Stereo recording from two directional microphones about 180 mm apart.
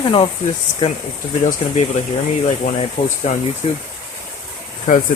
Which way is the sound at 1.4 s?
40° left (ahead or behind).